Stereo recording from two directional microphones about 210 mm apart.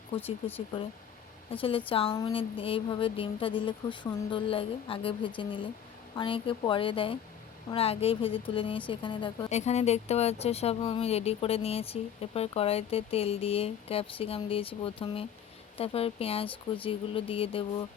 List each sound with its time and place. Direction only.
1.5 s a woman's voice: 25° left (ahead or behind)